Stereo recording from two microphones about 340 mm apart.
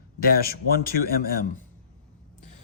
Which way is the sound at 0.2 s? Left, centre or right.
Left.